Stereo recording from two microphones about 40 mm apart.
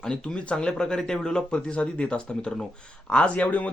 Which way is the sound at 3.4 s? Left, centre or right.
Left.